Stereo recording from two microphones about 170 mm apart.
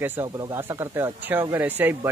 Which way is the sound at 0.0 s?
15° right (ahead or behind).